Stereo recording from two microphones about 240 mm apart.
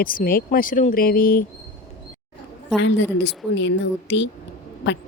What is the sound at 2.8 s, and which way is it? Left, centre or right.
Speech, left.